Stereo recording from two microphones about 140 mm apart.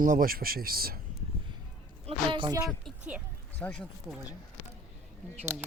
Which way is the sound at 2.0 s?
35° right (ahead or behind).